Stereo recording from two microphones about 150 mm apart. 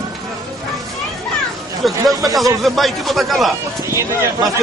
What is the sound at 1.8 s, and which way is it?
A man's voice, centre (ahead or behind).